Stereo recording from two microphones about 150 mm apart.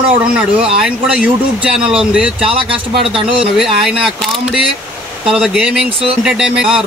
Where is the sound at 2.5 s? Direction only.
35° right (ahead or behind).